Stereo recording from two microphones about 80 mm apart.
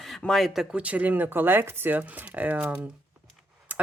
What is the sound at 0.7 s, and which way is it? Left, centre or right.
Speech, centre.